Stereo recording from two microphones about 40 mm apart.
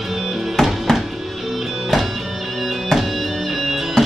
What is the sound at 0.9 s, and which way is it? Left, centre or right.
Music, centre.